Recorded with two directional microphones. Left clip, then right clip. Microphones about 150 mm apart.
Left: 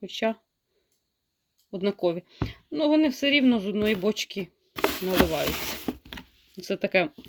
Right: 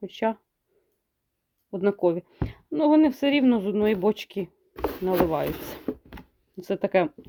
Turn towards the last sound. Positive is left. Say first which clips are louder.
# right 1 dB
turn(degrees=-5)  # may be behind; listen again after turning